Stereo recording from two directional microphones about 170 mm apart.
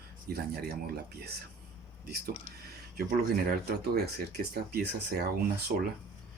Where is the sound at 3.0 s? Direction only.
65° right (ahead or behind).